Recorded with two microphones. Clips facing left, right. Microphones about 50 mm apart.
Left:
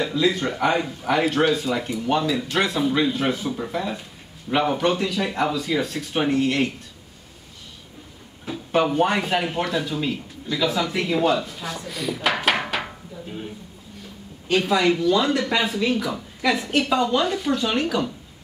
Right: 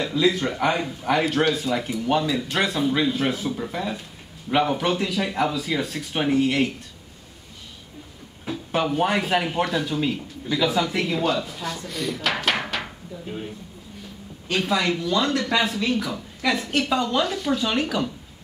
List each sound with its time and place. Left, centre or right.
0.0 s speech: centre
8.5 s speech: centre
14.5 s speech: centre